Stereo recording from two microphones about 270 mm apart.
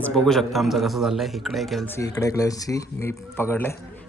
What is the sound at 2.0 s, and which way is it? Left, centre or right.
Speech, centre.